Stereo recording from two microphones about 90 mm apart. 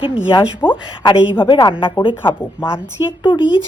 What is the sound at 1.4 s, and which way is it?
Speech, 65° left (ahead or behind).